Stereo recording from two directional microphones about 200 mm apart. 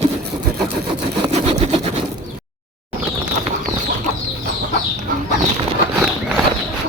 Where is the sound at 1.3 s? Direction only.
30° right (ahead or behind).